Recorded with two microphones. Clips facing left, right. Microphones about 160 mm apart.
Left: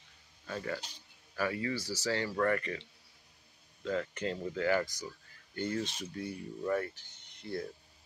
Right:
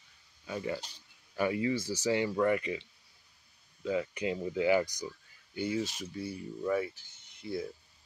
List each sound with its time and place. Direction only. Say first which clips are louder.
0.5 s speech: right 2 dB; 15° right (ahead or behind)
3.8 s speech: right 2 dB; 10° right (ahead or behind)